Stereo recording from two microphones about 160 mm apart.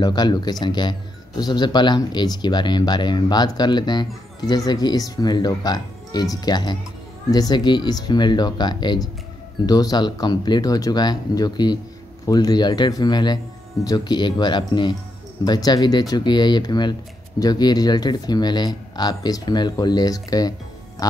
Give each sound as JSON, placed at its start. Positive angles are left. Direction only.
{"t": 0.0, "sound": "speech", "side_deg": 25}